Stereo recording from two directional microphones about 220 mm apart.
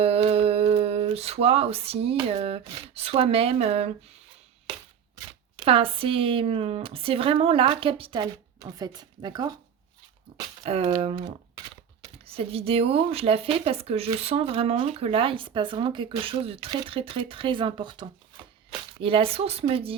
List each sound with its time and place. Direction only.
0.0 s a sound: 25° right (ahead or behind)
5.1 s speech: 20° right (ahead or behind)
10.6 s speech: 25° right (ahead or behind)